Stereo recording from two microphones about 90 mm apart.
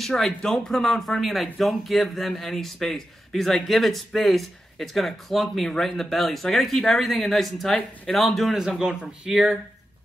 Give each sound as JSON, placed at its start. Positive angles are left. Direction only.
{"t": 0.0, "sound": "speech", "side_deg": 5}